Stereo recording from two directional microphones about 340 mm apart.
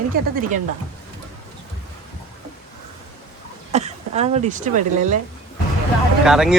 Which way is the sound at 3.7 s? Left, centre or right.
Centre.